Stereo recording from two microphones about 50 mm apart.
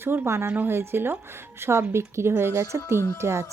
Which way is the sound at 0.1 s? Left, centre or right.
Right.